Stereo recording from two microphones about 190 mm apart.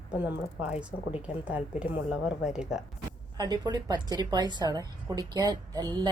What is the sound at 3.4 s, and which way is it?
A woman's voice, 20° right (ahead or behind).